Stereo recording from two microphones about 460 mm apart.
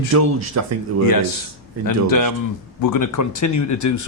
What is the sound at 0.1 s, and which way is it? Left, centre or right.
Speech, right.